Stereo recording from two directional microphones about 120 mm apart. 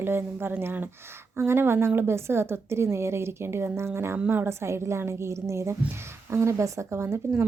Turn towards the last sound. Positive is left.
turn(degrees=-20)  # may be behind; listen again after turning